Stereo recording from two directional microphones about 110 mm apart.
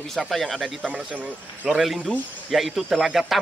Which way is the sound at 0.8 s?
10° right (ahead or behind).